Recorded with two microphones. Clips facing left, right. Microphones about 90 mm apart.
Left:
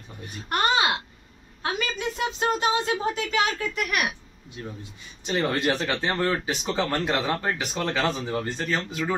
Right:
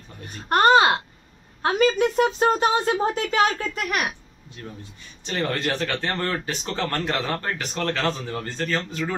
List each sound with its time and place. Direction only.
0.5 s a child's voice: 45° right (ahead or behind)
1.6 s a sound: 35° right (ahead or behind)
2.0 s speech: 45° right (ahead or behind)
5.2 s speech: 15° left (ahead or behind)